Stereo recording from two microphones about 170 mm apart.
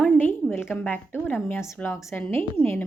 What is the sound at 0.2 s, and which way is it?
A woman's voice, 10° left (ahead or behind).